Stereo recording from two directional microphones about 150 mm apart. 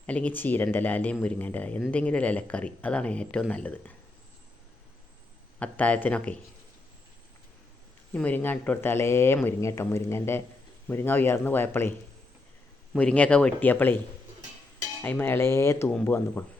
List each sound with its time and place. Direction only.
0.0 s speech: 10° left (ahead or behind)
5.5 s speech: 10° left (ahead or behind)
8.1 s speech: 10° left (ahead or behind)
13.0 s speech: 10° left (ahead or behind)
15.0 s speech: 15° left (ahead or behind)